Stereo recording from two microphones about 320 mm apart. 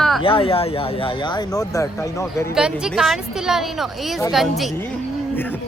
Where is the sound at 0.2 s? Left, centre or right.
Centre.